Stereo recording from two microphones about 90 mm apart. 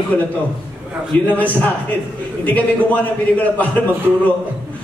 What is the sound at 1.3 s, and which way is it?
A man's voice, 15° left (ahead or behind).